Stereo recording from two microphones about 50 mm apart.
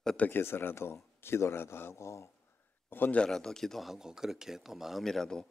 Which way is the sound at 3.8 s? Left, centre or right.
Centre.